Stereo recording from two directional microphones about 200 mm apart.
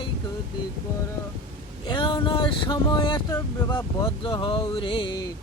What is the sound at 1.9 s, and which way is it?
Speech, 25° left (ahead or behind).